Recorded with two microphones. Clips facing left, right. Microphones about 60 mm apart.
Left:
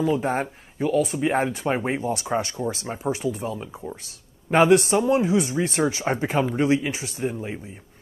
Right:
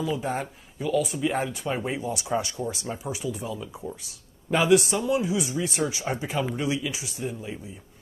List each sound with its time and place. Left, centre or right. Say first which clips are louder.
0.0 s speech: left 5 dB; left